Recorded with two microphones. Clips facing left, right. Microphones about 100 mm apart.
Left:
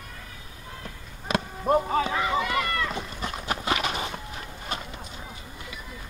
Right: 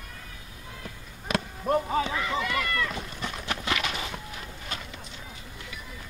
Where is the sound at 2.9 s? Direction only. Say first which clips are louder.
Left 2 dB; 25° left (ahead or behind).